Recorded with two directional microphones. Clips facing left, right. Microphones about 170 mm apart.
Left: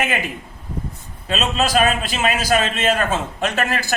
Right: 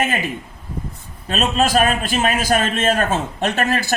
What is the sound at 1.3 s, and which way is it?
A man's voice, 45° right (ahead or behind).